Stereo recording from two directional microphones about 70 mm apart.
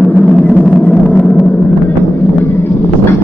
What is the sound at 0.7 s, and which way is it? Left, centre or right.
Vehicle, centre.